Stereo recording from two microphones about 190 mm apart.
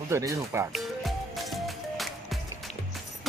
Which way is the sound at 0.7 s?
Centre (ahead or behind).